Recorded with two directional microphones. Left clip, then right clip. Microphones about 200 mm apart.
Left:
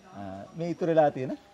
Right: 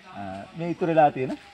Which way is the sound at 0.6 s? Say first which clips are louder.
Right 3 dB; 20° left (ahead or behind).